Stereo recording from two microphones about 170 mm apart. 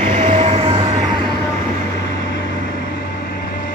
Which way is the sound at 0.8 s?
25° right (ahead or behind).